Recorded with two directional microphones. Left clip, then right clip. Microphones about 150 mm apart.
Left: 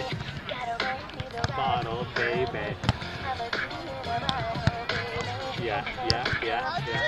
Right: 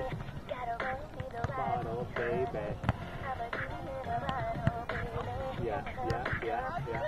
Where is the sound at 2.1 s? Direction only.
10° left (ahead or behind).